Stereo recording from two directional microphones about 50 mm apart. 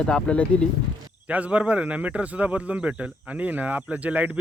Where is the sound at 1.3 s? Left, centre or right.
Right.